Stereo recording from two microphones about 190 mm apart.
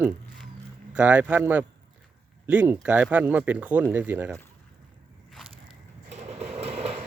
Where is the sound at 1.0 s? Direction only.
5° right (ahead or behind).